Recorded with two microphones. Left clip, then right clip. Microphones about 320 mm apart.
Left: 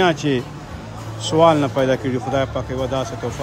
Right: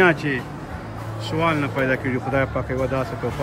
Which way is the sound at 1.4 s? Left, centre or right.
Centre.